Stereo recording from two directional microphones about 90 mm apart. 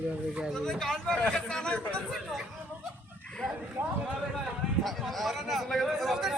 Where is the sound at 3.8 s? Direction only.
20° right (ahead or behind).